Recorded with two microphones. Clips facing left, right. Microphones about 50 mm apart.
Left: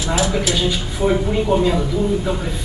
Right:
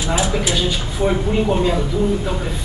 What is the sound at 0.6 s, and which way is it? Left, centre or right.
A man's voice, centre.